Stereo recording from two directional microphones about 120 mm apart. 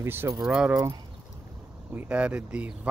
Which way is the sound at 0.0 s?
20° right (ahead or behind).